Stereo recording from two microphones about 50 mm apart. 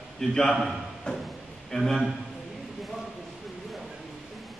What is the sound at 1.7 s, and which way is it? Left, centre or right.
Speech, centre.